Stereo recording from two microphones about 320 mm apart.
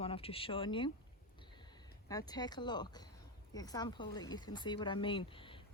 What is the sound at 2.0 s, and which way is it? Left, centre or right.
A woman's voice, centre.